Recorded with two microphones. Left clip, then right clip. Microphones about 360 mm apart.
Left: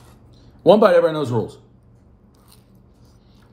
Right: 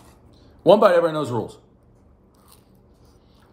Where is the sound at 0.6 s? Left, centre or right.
Centre.